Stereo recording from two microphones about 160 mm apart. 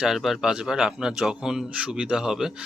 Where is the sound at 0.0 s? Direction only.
Centre (ahead or behind).